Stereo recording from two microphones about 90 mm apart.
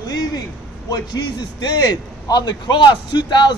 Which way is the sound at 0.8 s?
50° left (ahead or behind).